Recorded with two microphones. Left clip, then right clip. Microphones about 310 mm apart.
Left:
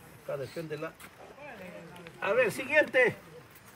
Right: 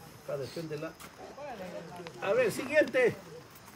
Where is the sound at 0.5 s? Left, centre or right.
Centre.